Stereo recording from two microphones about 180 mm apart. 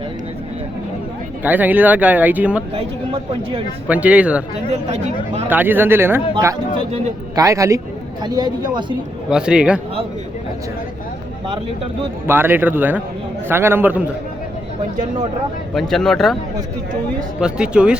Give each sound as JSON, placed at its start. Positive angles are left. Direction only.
{"t": 1.5, "sound": "speech", "side_deg": -10}
{"t": 2.7, "sound": "speech", "side_deg": -30}
{"t": 3.8, "sound": "speech", "side_deg": -10}
{"t": 4.7, "sound": "speech", "side_deg": -40}
{"t": 5.5, "sound": "a woman's voice", "side_deg": -10}
{"t": 9.3, "sound": "speech", "side_deg": -5}
{"t": 12.3, "sound": "speech", "side_deg": -10}
{"t": 15.7, "sound": "speech", "side_deg": 0}
{"t": 17.4, "sound": "speech", "side_deg": -5}